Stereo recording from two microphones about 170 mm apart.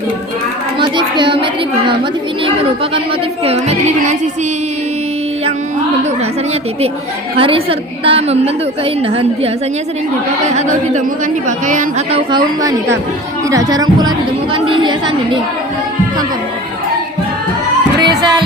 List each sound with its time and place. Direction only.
0.8 s child singing: 25° right (ahead or behind)
3.4 s a woman's voice: 40° right (ahead or behind)
7.3 s a woman's voice: 35° right (ahead or behind)
10.5 s a woman's voice: 45° right (ahead or behind)
13.5 s a woman's voice: 20° right (ahead or behind)
18.0 s music: 25° right (ahead or behind)